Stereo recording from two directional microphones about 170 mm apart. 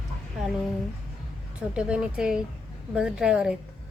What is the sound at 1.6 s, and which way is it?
Speech, 5° right (ahead or behind).